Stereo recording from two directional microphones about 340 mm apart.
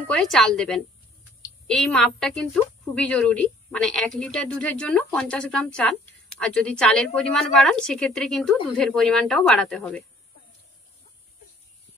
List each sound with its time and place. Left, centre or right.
0.1 s a woman's voice: centre